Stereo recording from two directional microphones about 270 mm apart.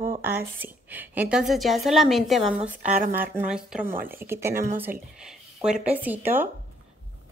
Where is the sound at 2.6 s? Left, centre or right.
Right.